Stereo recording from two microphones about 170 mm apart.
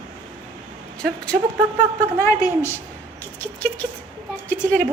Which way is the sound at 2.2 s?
15° left (ahead or behind).